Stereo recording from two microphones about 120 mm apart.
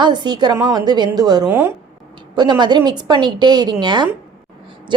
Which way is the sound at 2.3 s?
40° right (ahead or behind).